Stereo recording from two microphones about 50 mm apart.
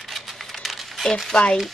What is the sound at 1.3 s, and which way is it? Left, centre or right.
Speech, centre.